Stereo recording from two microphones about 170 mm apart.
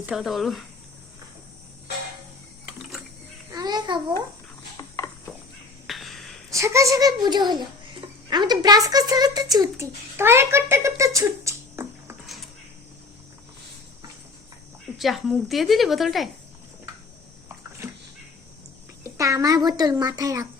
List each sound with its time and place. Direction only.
0.0 s a woman's voice: centre (ahead or behind)
3.5 s babbling: 25° right (ahead or behind)
4.8 s a sound: 20° left (ahead or behind)
5.9 s a sound: centre (ahead or behind)
6.5 s a child's voice: 15° right (ahead or behind)
14.9 s a woman's voice: centre (ahead or behind)
19.0 s a child's voice: 15° right (ahead or behind)